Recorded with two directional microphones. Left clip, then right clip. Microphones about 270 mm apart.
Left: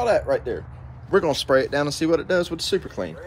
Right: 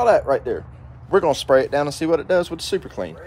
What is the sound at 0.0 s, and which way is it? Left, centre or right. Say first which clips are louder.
Speech: right 4 dB; right.